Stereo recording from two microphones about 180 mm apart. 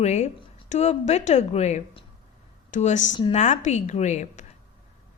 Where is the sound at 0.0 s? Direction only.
40° left (ahead or behind).